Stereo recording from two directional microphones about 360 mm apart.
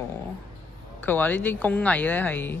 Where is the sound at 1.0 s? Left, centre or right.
Centre.